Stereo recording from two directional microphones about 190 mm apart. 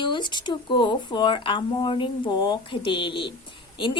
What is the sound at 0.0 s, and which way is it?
Speech, 25° left (ahead or behind).